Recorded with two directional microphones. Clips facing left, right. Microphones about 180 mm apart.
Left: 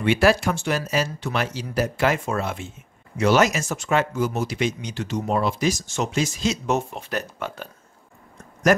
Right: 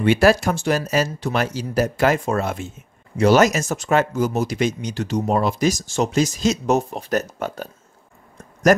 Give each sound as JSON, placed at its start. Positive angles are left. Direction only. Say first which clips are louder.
{"t": 0.0, "sound": "speech", "louder": "right 3 dB", "side_deg": -40}